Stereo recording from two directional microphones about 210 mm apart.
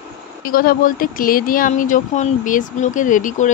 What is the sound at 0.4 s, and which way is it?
Speech, 45° left (ahead or behind).